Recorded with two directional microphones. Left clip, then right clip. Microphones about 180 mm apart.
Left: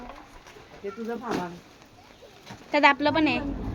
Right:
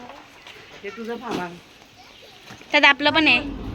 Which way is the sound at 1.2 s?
25° right (ahead or behind).